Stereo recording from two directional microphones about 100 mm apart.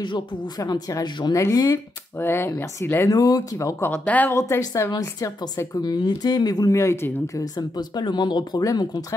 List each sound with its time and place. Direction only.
0.0 s speech: 50° left (ahead or behind)
0.6 s speech: 40° left (ahead or behind); by 3.1 s 25° left (ahead or behind)
3.1 s speech: 40° left (ahead or behind)
3.9 s speech: 15° left (ahead or behind)
4.3 s speech: 25° left (ahead or behind)
5.8 s speech: 45° left (ahead or behind)
6.8 s speech: 30° left (ahead or behind)